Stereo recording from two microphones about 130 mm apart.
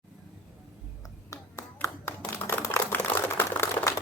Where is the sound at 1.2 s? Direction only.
25° left (ahead or behind).